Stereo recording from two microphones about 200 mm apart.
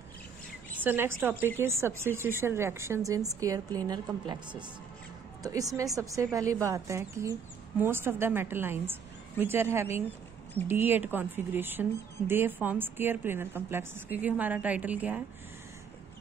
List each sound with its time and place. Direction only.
0.8 s speech: 10° right (ahead or behind)